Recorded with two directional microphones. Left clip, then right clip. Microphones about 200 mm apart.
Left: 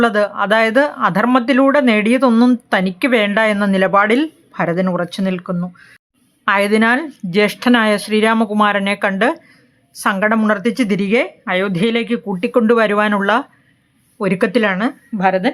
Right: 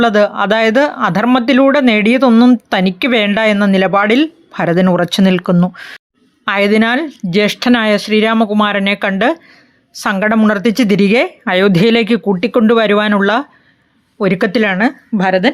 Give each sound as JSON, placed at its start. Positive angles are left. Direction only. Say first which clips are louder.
{"t": 0.0, "sound": "speech", "louder": "right 4 dB", "side_deg": -15}
{"t": 4.5, "sound": "speech", "louder": "right 5 dB", "side_deg": -30}
{"t": 6.4, "sound": "a woman's voice", "louder": "right 1 dB", "side_deg": -15}